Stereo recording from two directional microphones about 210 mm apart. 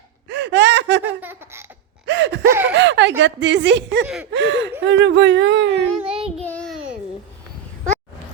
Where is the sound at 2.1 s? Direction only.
55° right (ahead or behind).